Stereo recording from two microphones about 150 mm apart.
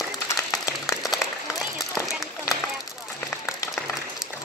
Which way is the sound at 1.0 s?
Centre (ahead or behind).